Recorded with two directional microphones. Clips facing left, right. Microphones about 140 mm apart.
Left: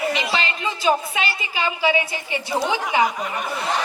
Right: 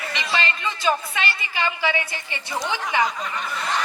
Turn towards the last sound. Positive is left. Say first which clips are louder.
# left 3 dB
turn(degrees=15)  # may be behind; listen again after turning